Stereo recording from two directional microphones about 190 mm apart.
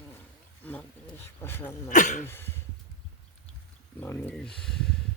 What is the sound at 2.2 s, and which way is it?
Throat clearing, 10° left (ahead or behind).